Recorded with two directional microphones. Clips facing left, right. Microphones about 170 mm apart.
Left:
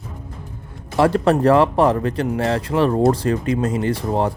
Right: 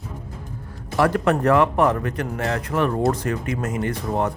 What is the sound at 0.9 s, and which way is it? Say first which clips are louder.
Speech: left 3 dB; 30° left (ahead or behind).